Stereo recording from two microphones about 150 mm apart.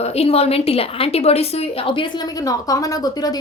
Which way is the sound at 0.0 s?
45° left (ahead or behind).